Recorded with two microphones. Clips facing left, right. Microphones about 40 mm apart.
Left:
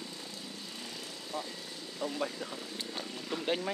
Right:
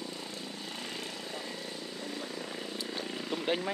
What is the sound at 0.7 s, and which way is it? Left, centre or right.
Vehicle, right.